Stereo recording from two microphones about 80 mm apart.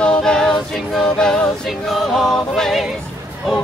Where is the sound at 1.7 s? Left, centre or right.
Centre.